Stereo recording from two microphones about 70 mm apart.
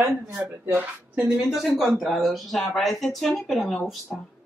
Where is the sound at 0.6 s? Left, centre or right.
Right.